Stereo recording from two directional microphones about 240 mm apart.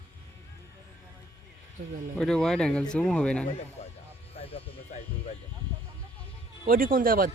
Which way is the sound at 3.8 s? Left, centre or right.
Left.